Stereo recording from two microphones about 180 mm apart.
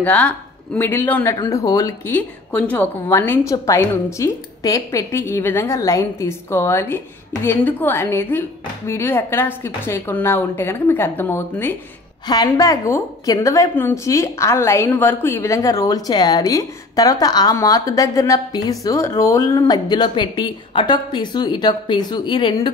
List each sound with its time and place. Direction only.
0.0 s a woman's voice: 10° left (ahead or behind); by 22.7 s 25° left (ahead or behind)